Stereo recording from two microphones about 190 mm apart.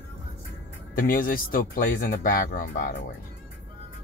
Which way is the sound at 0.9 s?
45° left (ahead or behind).